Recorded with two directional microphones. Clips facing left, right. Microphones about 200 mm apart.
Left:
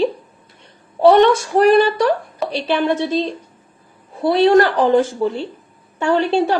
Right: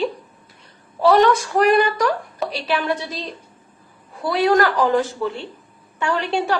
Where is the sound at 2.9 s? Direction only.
25° left (ahead or behind).